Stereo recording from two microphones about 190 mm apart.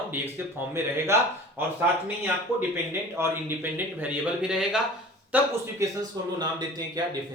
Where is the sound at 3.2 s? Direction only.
10° right (ahead or behind).